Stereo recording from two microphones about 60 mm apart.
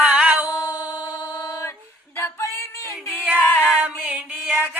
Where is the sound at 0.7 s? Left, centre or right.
Right.